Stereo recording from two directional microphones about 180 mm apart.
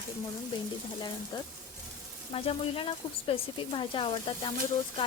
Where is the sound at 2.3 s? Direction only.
30° left (ahead or behind).